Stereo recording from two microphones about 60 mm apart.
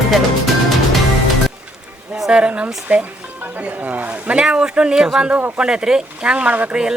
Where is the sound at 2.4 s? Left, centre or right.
Centre.